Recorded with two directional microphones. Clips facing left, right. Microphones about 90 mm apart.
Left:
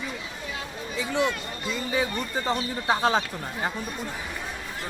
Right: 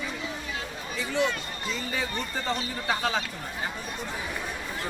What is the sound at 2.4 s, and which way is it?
Speech, 30° left (ahead or behind).